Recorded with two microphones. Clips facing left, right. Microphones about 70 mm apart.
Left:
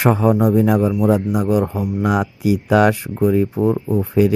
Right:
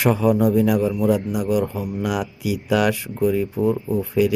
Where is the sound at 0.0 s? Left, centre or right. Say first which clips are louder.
Left 2 dB; left.